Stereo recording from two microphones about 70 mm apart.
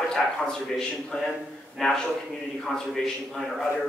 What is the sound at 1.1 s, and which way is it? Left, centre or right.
A man's voice, centre.